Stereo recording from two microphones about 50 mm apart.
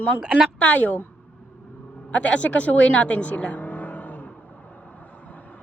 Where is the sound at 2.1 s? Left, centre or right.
Left.